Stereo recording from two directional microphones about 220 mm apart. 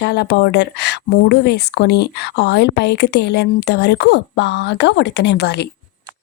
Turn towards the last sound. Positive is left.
turn(degrees=50)  # may be behind; listen again after turning